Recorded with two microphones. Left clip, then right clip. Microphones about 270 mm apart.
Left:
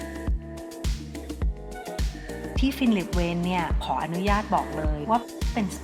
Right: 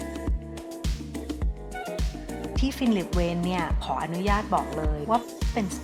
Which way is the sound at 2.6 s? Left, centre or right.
Centre.